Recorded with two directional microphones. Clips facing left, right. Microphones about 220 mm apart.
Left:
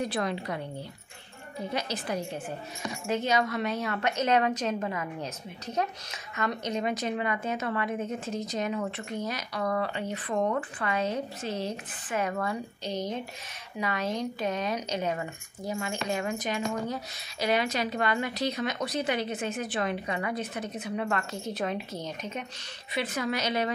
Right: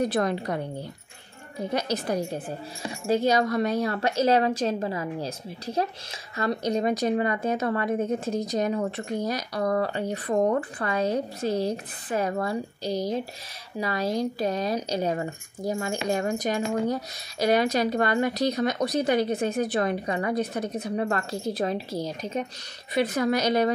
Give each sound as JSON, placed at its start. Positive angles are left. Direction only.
{"t": 0.0, "sound": "a woman's voice", "side_deg": -45}
{"t": 1.7, "sound": "a woman's voice", "side_deg": -40}